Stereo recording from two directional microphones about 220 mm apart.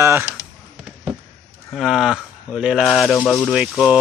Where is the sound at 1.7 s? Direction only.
Centre (ahead or behind).